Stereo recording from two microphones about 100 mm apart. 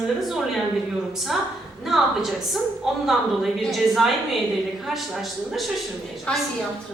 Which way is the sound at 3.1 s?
Centre (ahead or behind).